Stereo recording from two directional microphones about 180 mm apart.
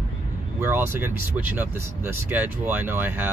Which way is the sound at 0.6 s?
10° right (ahead or behind).